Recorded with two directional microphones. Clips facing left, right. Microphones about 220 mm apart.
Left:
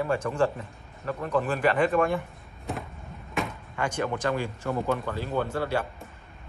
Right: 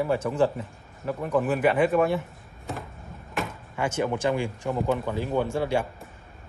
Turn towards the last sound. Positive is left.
turn(degrees=-10)  # may be behind; listen again after turning